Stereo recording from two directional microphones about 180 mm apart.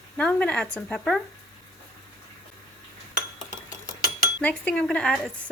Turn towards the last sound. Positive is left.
turn(degrees=5)  # may be behind; listen again after turning